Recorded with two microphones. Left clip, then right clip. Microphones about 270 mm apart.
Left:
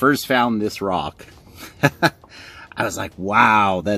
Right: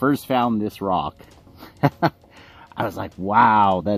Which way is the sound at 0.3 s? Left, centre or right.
Centre.